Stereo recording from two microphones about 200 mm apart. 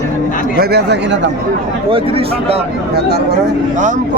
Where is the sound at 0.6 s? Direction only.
55° right (ahead or behind).